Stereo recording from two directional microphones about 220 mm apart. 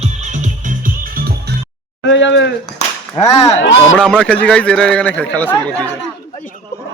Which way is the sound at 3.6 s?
55° left (ahead or behind).